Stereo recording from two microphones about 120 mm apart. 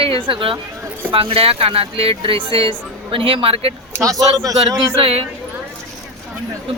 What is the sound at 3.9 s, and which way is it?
Speech, 25° right (ahead or behind).